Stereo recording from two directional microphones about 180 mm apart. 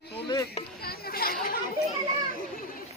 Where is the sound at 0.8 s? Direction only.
60° left (ahead or behind).